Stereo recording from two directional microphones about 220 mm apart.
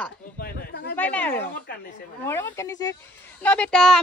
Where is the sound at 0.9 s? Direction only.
5° left (ahead or behind).